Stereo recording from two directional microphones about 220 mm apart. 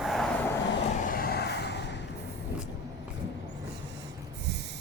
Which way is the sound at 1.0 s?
45° left (ahead or behind).